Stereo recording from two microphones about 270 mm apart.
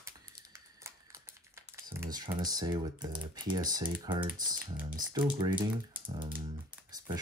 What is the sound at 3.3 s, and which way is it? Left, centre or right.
Speech, centre.